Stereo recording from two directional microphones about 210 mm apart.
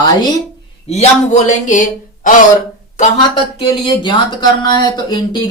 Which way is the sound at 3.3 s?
25° left (ahead or behind).